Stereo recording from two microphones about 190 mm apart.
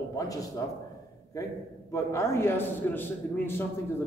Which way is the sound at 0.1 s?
20° left (ahead or behind).